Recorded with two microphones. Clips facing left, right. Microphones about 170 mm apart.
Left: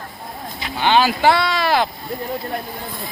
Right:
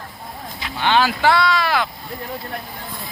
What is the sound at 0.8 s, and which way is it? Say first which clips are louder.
Speech: left 2 dB; 15° left (ahead or behind).